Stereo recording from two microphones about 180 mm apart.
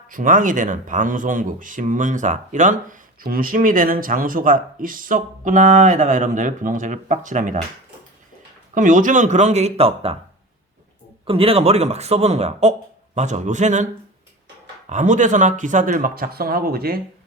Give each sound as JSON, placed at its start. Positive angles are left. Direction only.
{"t": 0.1, "sound": "speech", "side_deg": -50}
{"t": 8.7, "sound": "a man's voice", "side_deg": -45}
{"t": 11.3, "sound": "a man's voice", "side_deg": -30}
{"t": 14.8, "sound": "speech", "side_deg": -40}